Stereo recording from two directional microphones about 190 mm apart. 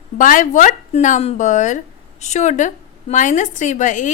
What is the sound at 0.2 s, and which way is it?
Speech, 45° left (ahead or behind).